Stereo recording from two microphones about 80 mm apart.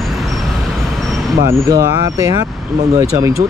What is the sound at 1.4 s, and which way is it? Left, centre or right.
Speech, right.